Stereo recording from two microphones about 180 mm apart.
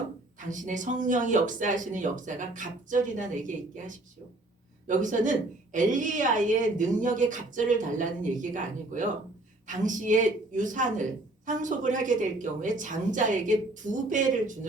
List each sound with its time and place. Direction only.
0.3 s a woman's voice: 45° right (ahead or behind)